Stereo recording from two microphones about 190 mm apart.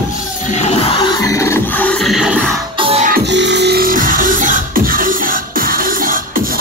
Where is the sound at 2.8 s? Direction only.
30° right (ahead or behind).